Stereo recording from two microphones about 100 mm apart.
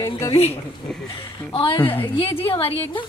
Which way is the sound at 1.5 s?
65° left (ahead or behind).